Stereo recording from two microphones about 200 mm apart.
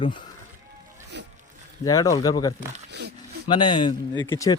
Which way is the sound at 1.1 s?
60° right (ahead or behind).